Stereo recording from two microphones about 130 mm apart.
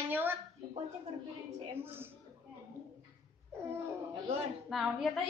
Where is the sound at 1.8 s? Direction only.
15° right (ahead or behind).